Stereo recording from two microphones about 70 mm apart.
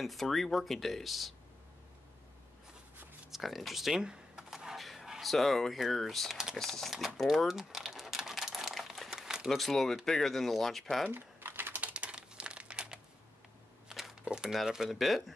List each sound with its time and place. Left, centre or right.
0.0 s speech: centre
3.3 s speech: centre
7.2 s typing: centre
10.0 s speech: centre
11.1 s typing: right
11.7 s crumpling: centre
13.8 s a sound: centre
14.2 s speech: centre